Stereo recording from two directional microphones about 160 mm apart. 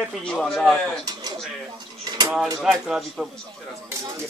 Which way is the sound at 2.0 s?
25° right (ahead or behind).